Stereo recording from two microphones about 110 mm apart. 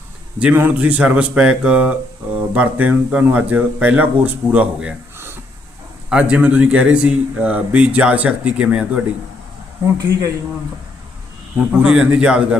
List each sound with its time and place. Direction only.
0.3 s speech: 15° right (ahead or behind)
6.1 s speech: 10° right (ahead or behind)
9.8 s speech: 30° right (ahead or behind)
11.8 s speech: 5° right (ahead or behind)